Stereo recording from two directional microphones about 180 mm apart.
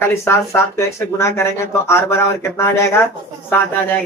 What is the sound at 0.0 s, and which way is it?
Speech, 15° left (ahead or behind).